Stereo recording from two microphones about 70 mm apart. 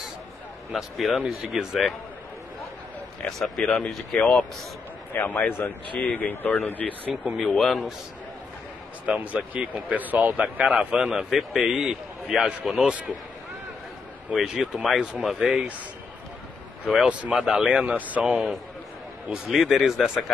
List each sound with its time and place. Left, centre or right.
0.7 s speech: centre
3.3 s speech: centre
5.2 s speech: left
6.8 s speech: centre
9.0 s speech: centre
14.3 s speech: centre
16.9 s speech: centre
17.9 s speech: right
18.2 s speech: centre